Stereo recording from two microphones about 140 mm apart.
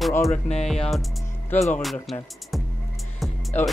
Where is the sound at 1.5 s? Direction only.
15° left (ahead or behind).